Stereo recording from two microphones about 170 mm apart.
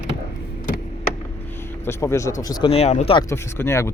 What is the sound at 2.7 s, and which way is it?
Speech, 40° left (ahead or behind).